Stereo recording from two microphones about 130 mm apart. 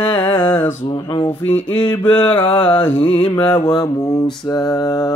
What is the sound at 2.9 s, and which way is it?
Mantra, 55° left (ahead or behind).